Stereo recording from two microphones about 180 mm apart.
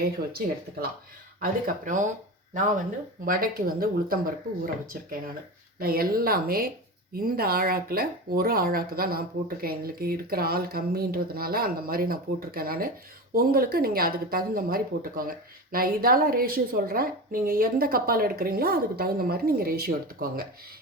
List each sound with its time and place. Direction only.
0.0 s speech: 60° right (ahead or behind)
3.2 s speech: 55° right (ahead or behind)
5.8 s speech: 55° right (ahead or behind)